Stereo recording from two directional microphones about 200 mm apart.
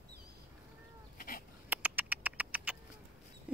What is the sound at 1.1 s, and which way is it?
Goat, 45° left (ahead or behind).